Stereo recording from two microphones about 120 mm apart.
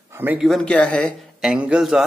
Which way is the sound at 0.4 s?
5° left (ahead or behind).